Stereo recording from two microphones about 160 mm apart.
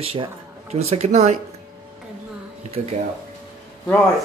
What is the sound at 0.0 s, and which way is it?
Speech, 35° right (ahead or behind).